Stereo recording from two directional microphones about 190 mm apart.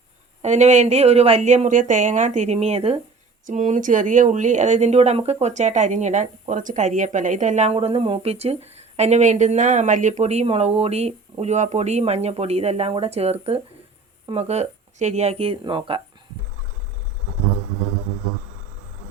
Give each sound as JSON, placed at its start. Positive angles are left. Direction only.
{"t": 0.4, "sound": "speech", "side_deg": -40}